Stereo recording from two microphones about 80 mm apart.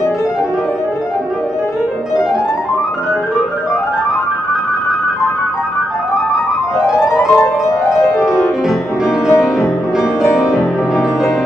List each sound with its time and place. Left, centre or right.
6.8 s music: left
8.6 s music: centre